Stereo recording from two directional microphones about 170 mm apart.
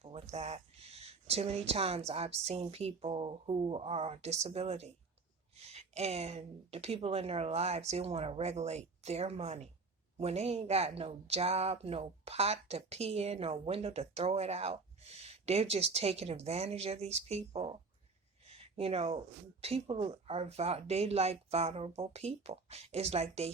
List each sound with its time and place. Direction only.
0.0 s speech: 35° right (ahead or behind)
18.4 s a sound: 35° right (ahead or behind)
19.6 s speech: 35° right (ahead or behind)